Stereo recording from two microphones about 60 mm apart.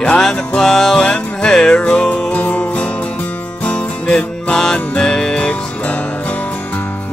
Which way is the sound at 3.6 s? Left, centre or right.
Centre.